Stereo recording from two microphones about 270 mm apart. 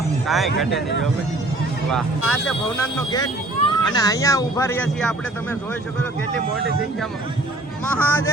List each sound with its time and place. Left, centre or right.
0.3 s speech: centre
0.7 s speech: left
1.9 s speech: centre
7.9 s speech: centre